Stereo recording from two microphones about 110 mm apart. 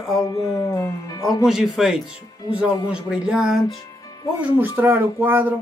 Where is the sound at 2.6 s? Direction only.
10° right (ahead or behind).